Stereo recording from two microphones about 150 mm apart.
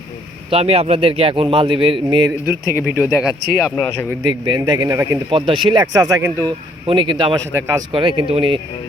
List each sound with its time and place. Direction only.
0.5 s a man's voice: 40° right (ahead or behind)
2.5 s speech: 10° right (ahead or behind)
3.8 s speech: 15° left (ahead or behind)
4.2 s speech: 30° right (ahead or behind)
5.3 s speech: 35° right (ahead or behind)
6.8 s a man's voice: 35° right (ahead or behind)